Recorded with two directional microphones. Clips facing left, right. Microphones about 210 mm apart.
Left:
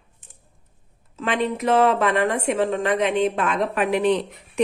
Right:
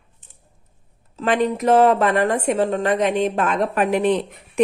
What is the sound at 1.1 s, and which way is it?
A woman's voice, 40° right (ahead or behind).